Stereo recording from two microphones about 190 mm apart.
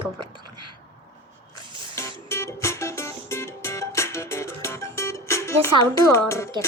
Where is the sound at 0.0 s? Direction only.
25° right (ahead or behind).